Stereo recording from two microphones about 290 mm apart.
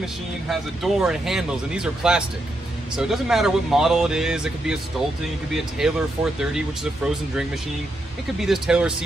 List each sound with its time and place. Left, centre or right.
0.0 s speech: centre
8.4 s speech: centre